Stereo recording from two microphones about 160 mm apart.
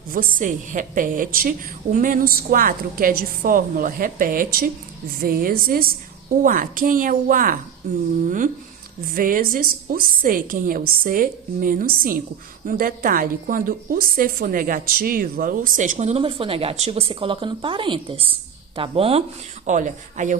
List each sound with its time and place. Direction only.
0.1 s a woman's voice: 60° right (ahead or behind)
9.0 s a woman's voice: 60° right (ahead or behind); by 19.2 s 35° right (ahead or behind)
19.6 s a woman's voice: 50° right (ahead or behind)